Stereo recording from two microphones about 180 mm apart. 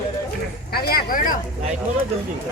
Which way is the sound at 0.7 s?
55° left (ahead or behind).